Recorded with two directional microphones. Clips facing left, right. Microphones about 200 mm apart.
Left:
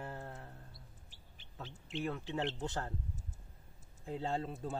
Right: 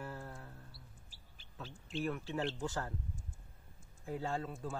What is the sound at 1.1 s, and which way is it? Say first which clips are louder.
Speech: left 1 dB; 20° left (ahead or behind).